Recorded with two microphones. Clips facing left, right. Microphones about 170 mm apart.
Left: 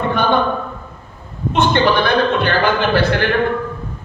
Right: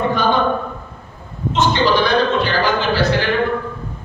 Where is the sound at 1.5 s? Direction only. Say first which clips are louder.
Left 1 dB; 55° left (ahead or behind).